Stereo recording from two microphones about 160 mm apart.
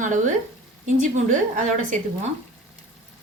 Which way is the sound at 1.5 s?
50° right (ahead or behind).